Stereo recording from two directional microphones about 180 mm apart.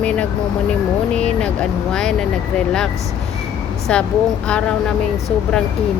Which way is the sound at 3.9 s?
5° left (ahead or behind).